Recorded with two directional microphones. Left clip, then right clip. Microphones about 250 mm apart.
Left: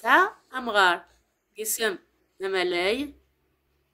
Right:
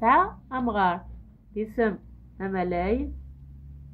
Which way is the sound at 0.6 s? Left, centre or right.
Left.